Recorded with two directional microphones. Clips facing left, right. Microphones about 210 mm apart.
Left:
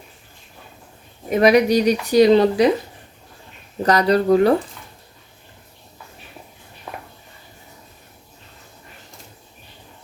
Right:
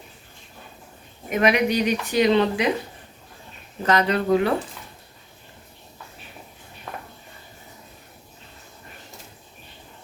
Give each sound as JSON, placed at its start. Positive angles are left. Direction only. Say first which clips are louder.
{"t": 1.3, "sound": "speech", "louder": "left 6 dB", "side_deg": 35}
{"t": 3.8, "sound": "speech", "louder": "left 4 dB", "side_deg": 35}
{"t": 6.9, "sound": "a sound", "louder": "left 2 dB", "side_deg": 10}